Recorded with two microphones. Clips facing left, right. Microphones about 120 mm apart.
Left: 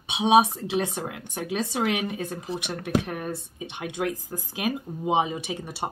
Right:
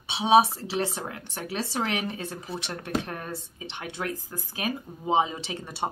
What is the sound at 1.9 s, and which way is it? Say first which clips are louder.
Speech: left 3 dB; 15° left (ahead or behind).